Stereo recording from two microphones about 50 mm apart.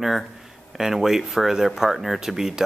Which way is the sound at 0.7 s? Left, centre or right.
Centre.